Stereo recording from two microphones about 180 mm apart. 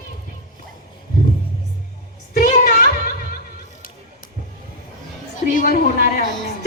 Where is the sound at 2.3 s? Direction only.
50° left (ahead or behind).